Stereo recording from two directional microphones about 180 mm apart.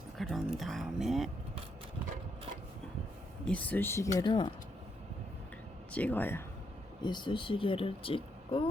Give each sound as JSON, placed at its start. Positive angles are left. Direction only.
{"t": 0.2, "sound": "speech", "side_deg": 0}
{"t": 3.4, "sound": "speech", "side_deg": 10}
{"t": 5.9, "sound": "speech", "side_deg": 10}
{"t": 7.0, "sound": "speech", "side_deg": 25}